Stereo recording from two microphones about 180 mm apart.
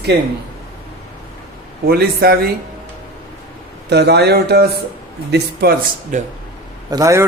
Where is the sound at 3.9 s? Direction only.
65° right (ahead or behind).